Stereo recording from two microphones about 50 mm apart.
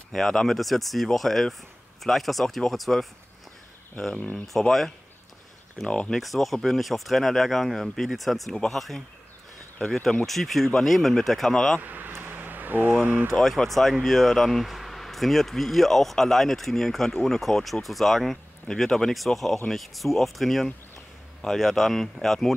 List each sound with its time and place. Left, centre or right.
0.1 s speech: centre
4.5 s speech: centre
5.9 s speech: centre
6.1 s speech: centre
11.8 s a sound: right
13.3 s speech: centre